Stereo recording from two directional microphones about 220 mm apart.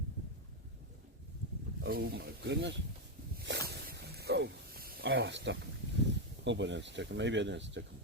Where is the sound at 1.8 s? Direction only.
45° right (ahead or behind).